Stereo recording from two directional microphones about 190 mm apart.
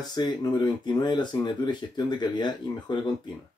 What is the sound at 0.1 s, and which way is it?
Speech, 20° left (ahead or behind).